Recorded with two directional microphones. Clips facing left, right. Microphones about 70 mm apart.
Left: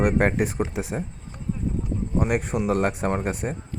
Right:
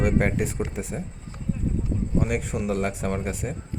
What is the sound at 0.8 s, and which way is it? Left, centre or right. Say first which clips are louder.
Speech: left 3 dB; left.